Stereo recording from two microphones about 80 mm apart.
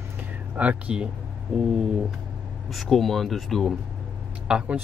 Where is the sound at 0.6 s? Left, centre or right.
Centre.